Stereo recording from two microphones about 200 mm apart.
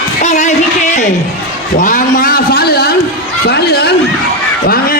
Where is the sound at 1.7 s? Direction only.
40° left (ahead or behind).